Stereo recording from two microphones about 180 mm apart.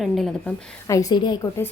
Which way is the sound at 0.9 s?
20° left (ahead or behind).